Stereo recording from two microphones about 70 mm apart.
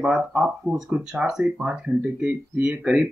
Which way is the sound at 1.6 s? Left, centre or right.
Centre.